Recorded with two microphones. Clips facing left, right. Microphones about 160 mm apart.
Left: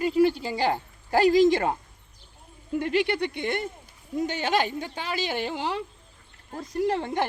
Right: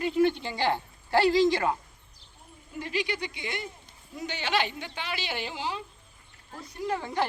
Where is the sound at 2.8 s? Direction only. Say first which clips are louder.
Left 7 dB; 55° left (ahead or behind).